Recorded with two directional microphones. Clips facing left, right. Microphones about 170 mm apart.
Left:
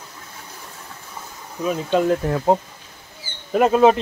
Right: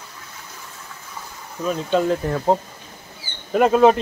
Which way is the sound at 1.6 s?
5° left (ahead or behind).